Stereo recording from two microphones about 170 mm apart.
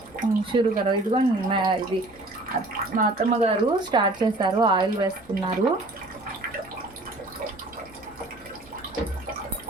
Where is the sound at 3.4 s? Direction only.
35° right (ahead or behind).